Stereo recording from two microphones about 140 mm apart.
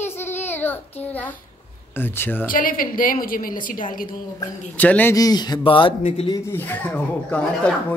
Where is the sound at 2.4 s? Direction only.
80° left.